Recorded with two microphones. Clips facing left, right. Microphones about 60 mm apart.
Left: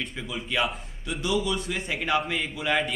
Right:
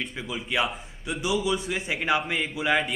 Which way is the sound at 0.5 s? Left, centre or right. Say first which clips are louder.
Even; centre.